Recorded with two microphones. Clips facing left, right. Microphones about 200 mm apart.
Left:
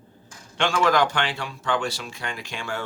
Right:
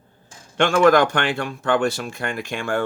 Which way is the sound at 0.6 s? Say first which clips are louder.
Right 6 dB; 50° right (ahead or behind).